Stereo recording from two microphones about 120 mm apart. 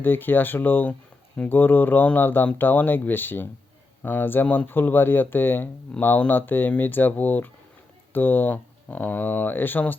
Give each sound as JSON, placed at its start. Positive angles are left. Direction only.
{"t": 0.0, "sound": "speech", "side_deg": 15}